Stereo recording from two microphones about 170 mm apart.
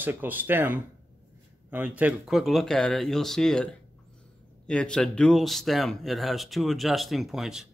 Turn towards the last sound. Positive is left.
turn(degrees=-5)  # may be behind; listen again after turning